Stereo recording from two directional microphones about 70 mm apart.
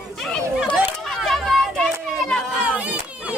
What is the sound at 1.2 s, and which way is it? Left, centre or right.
Children playing, centre.